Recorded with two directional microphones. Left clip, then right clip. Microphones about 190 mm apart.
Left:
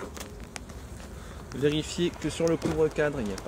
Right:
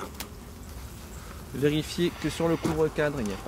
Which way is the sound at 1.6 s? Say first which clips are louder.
Right 1 dB; 35° right (ahead or behind).